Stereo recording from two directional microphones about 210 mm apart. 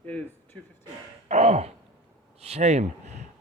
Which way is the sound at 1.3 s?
30° right (ahead or behind).